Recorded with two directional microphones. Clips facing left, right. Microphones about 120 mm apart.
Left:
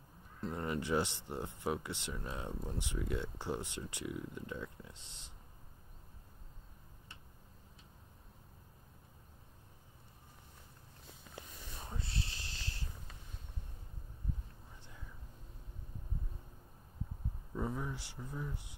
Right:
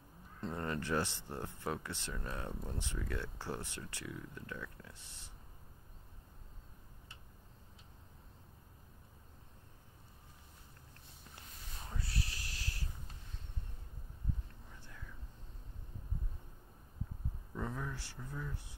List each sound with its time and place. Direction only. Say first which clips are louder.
0.4 s speech: left 1 dB; 5° left (ahead or behind)
0.7 s speech: left 2 dB; 15° left (ahead or behind)
11.9 s a sound: right 1 dB; 25° left (ahead or behind)
14.8 s whispering: right 2 dB; 20° left (ahead or behind)
17.6 s speech: left 3 dB; 15° left (ahead or behind)